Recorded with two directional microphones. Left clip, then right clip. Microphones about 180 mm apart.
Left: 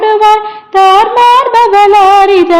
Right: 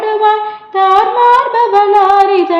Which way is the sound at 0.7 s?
55° left (ahead or behind).